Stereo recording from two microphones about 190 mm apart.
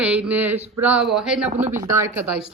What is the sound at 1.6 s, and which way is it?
Speech, 40° right (ahead or behind).